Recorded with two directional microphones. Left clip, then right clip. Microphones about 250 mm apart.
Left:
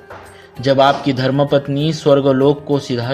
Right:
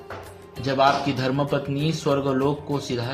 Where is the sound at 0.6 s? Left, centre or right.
Left.